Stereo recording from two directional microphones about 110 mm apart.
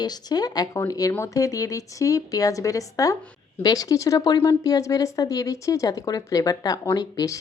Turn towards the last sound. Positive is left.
turn(degrees=35)  # may be behind; listen again after turning